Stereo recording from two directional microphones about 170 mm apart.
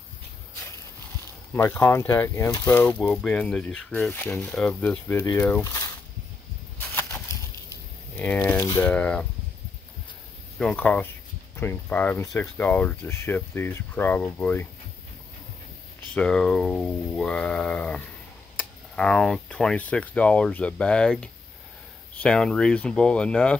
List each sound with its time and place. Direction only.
1.5 s speech: 15° left (ahead or behind)
2.8 s speech: 5° left (ahead or behind)
6.8 s a sound: 10° left (ahead or behind)
8.7 s speech: 10° left (ahead or behind)
10.6 s speech: 5° left (ahead or behind)
16.2 s speech: 5° left (ahead or behind)